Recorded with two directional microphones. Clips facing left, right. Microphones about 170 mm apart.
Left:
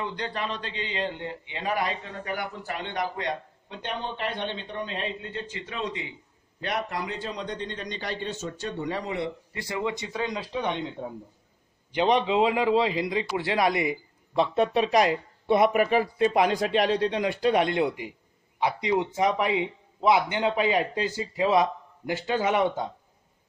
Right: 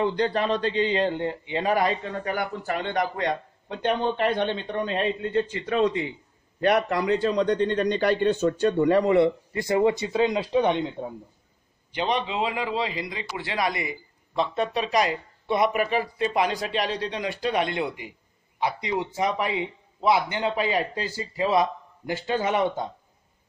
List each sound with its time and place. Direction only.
0.0 s a man's voice: 35° right (ahead or behind); by 6.1 s 55° right (ahead or behind)
6.6 s a man's voice: 65° right (ahead or behind)
9.7 s speech: 40° right (ahead or behind)
10.1 s speech: 25° right (ahead or behind)
11.9 s a man's voice: 15° left (ahead or behind)
15.4 s speech: 55° left (ahead or behind)
15.7 s speech: centre (ahead or behind)
16.3 s speech: 50° left (ahead or behind)
17.5 s speech: centre (ahead or behind)
18.6 s a man's voice: 15° left (ahead or behind)